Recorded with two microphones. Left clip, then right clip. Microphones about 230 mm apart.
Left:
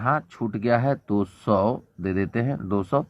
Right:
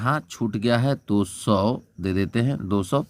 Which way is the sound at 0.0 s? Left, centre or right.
Right.